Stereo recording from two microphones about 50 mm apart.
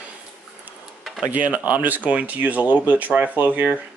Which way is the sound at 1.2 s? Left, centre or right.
Right.